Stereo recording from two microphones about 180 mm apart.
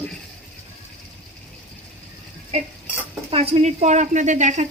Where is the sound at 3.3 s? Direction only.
35° right (ahead or behind).